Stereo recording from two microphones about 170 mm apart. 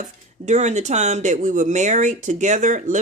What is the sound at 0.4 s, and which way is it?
Speech, 45° right (ahead or behind).